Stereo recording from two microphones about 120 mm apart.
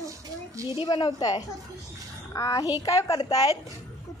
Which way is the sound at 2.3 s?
30° left (ahead or behind).